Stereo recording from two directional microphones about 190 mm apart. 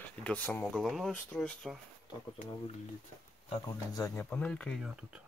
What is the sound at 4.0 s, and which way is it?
Speech, 5° left (ahead or behind).